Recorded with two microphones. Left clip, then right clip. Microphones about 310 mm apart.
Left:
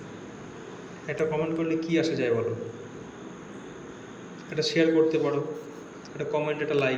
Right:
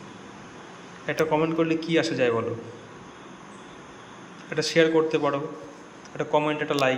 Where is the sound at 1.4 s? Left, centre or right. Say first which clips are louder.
Right 3 dB; centre.